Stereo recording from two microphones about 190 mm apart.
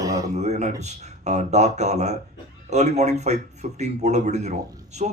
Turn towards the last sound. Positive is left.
turn(degrees=-35)  # may be behind; listen again after turning